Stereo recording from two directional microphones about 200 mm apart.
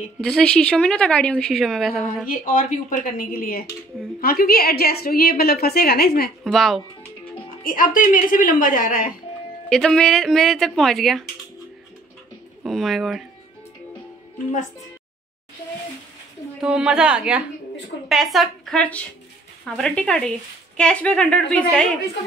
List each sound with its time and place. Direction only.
0.2 s a woman's voice: 5° left (ahead or behind)
2.2 s a woman's voice: 45° left (ahead or behind)
6.4 s a woman's voice: centre (ahead or behind)
7.6 s a woman's voice: 45° left (ahead or behind)
9.7 s a woman's voice: 5° left (ahead or behind)
12.6 s a woman's voice: centre (ahead or behind)
16.6 s a woman's voice: 5° right (ahead or behind)